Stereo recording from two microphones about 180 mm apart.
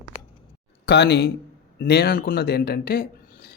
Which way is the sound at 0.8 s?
65° left (ahead or behind).